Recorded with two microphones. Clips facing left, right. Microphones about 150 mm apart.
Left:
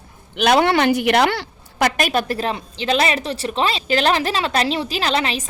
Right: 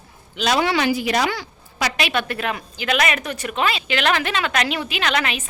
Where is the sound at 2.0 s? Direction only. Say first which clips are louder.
Left 3 dB; 40° left (ahead or behind).